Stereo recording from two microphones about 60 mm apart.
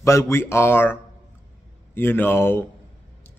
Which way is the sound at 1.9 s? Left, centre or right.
Left.